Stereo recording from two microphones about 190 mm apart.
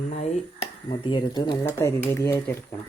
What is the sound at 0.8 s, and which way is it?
Speech, 25° left (ahead or behind).